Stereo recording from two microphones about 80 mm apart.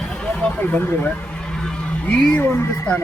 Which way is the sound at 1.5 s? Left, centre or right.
Centre.